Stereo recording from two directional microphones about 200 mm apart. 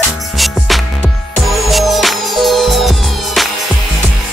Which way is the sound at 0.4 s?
Centre (ahead or behind).